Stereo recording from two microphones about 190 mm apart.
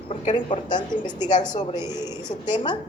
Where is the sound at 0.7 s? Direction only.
20° left (ahead or behind).